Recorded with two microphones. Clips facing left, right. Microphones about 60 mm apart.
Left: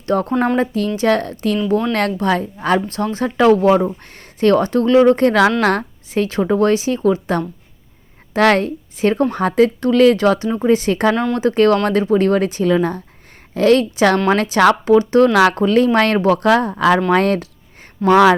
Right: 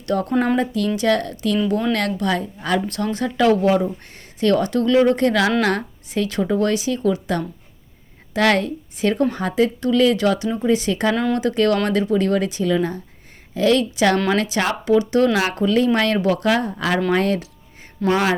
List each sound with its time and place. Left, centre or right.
0.0 s speech: left
11.1 s speech: centre
11.3 s speech: left
15.3 s speech: left
15.5 s speech: left
18.1 s speech: left